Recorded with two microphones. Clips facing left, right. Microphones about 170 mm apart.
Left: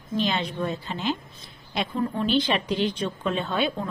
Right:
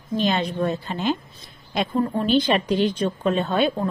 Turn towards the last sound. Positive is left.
turn(degrees=-45)  # may be behind; listen again after turning